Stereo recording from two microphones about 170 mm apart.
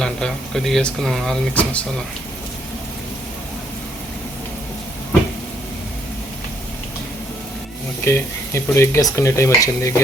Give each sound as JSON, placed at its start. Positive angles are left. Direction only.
{"t": 0.0, "sound": "speech", "side_deg": 0}
{"t": 8.0, "sound": "speech", "side_deg": 15}